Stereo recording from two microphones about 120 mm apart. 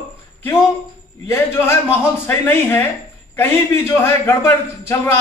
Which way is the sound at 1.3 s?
20° left (ahead or behind).